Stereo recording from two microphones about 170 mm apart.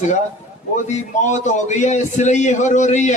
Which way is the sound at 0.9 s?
45° left (ahead or behind).